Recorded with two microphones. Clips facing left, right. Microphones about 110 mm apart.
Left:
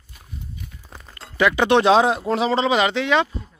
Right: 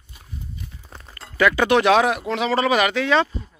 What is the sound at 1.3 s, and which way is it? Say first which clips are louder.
A man's voice: even; 20° left (ahead or behind).